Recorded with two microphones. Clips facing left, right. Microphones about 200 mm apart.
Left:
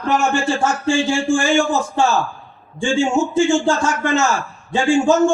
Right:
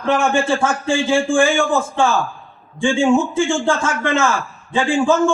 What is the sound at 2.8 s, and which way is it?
A man's voice, 55° right (ahead or behind).